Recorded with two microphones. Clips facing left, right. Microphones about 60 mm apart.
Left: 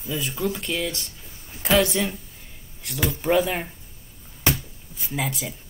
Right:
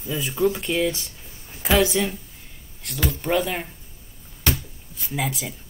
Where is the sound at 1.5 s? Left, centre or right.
Centre.